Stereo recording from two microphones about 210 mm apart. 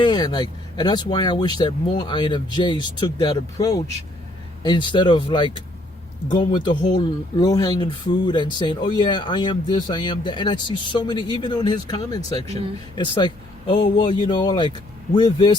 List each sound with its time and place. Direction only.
0.0 s speech: 20° left (ahead or behind)